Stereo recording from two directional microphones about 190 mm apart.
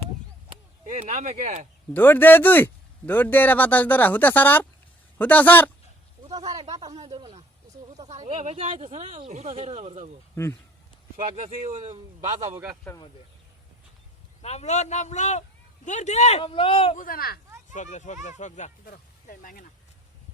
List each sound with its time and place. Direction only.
0.9 s speech: 40° right (ahead or behind)
1.9 s speech: 10° left (ahead or behind)
6.3 s speech: 20° right (ahead or behind)
11.3 s speech: 35° right (ahead or behind)
12.4 s a man's voice: 15° right (ahead or behind)
12.9 s speech: 5° left (ahead or behind)
14.4 s speech: 35° left (ahead or behind)
17.0 s speech: 50° left (ahead or behind)
17.7 s speech: 40° left (ahead or behind)